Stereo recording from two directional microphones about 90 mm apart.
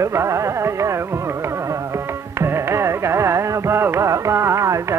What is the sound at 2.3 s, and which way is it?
Carnatic music, 30° right (ahead or behind).